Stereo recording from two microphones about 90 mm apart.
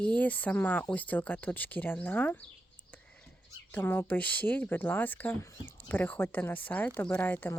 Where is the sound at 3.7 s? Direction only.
25° left (ahead or behind).